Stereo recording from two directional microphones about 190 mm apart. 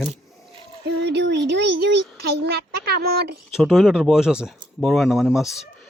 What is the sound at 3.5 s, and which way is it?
Speech, centre (ahead or behind).